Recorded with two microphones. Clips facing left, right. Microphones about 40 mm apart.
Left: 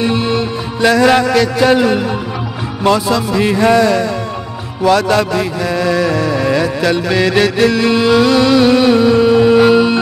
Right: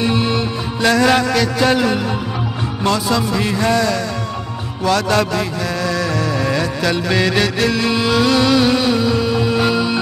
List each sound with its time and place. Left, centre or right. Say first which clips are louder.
0.0 s music: left 3 dB; centre
2.8 s speech: left 5 dB; centre
3.4 s speech: left 8 dB; centre
4.8 s mantra: left 4 dB; centre